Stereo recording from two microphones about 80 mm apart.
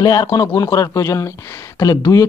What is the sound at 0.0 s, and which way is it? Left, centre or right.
A woman's voice, left.